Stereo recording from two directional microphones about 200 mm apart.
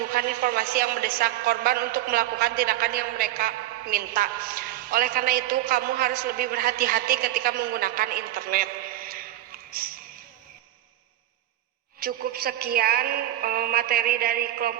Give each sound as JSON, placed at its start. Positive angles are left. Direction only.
{"t": 0.1, "sound": "a woman's voice", "side_deg": -45}
{"t": 11.9, "sound": "a woman's voice", "side_deg": -50}